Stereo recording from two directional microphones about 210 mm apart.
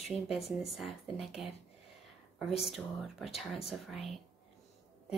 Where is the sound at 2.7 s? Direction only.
Centre (ahead or behind).